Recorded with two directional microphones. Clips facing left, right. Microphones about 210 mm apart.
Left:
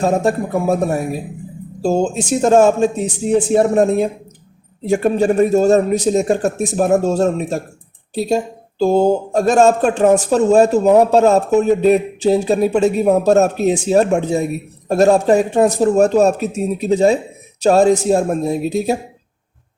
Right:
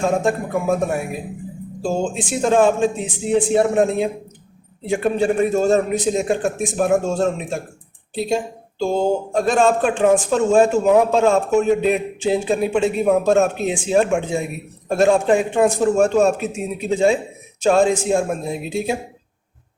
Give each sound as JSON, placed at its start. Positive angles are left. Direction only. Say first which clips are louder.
{"t": 0.0, "sound": "speech", "louder": "left 3 dB", "side_deg": 40}